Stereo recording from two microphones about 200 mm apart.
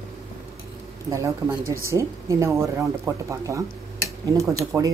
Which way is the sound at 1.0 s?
15° right (ahead or behind).